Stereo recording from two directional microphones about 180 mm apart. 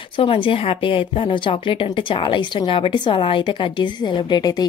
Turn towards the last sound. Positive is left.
turn(degrees=25)  # may be behind; listen again after turning